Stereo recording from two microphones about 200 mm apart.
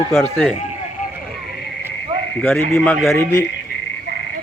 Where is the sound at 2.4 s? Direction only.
10° left (ahead or behind).